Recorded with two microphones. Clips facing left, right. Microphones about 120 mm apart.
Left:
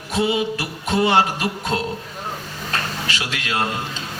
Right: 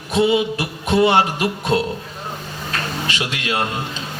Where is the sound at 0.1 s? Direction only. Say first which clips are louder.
Right 4 dB; 20° right (ahead or behind).